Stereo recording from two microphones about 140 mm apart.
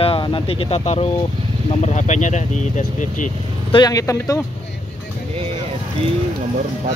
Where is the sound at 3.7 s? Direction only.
25° left (ahead or behind).